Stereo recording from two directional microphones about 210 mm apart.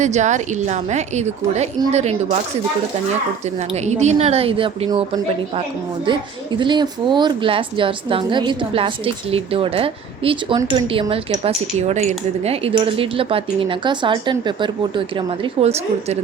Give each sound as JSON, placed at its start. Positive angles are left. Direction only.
{"t": 0.0, "sound": "a woman's voice", "side_deg": -35}
{"t": 3.8, "sound": "a woman's voice", "side_deg": -35}